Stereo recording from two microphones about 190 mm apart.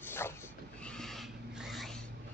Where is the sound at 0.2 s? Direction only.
15° left (ahead or behind).